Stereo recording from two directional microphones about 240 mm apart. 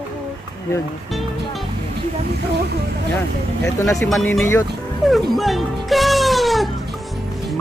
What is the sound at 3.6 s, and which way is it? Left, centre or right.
Speech, centre.